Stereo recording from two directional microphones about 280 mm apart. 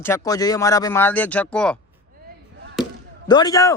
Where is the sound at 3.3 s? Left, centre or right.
Centre.